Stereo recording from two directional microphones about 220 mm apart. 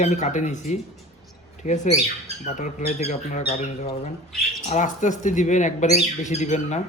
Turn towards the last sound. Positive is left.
turn(degrees=30)  # may be behind; listen again after turning